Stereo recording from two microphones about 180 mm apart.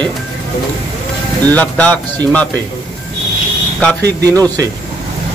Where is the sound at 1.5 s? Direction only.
10° left (ahead or behind).